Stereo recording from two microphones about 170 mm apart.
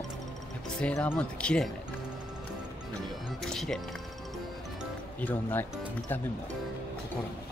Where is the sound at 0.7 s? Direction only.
10° left (ahead or behind).